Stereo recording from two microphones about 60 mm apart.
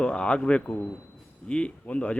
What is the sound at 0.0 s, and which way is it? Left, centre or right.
A man's voice, centre.